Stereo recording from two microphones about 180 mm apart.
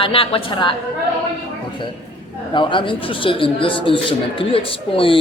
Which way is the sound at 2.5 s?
25° left (ahead or behind).